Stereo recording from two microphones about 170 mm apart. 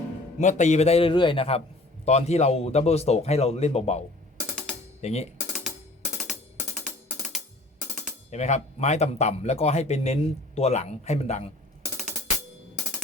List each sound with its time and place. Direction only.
0.3 s speech: 45° left (ahead or behind)
6.7 s music: 5° right (ahead or behind)
8.3 s speech: 40° left (ahead or behind)